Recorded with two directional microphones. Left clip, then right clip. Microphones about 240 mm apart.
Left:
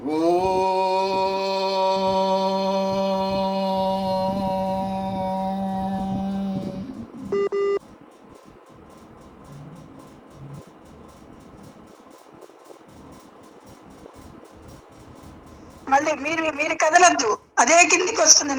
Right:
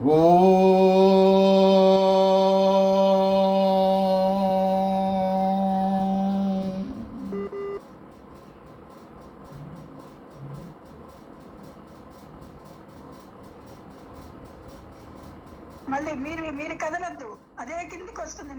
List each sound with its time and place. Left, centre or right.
0.2 s mantra: centre
7.3 s a sound: left
15.9 s a woman's voice: left